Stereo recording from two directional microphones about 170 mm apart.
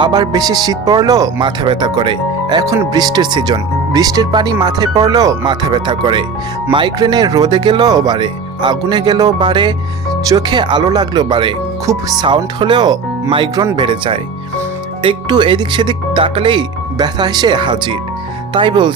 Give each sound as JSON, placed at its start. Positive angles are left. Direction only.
{"t": 0.0, "sound": "speech", "side_deg": -25}